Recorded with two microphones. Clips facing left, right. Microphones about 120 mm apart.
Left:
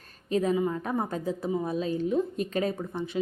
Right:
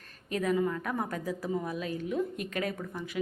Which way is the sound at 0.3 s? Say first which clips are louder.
Left 3 dB; 25° left (ahead or behind).